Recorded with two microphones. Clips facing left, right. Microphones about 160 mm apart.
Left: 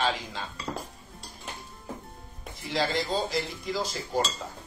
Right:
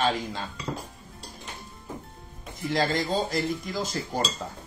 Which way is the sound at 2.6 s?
50° right (ahead or behind).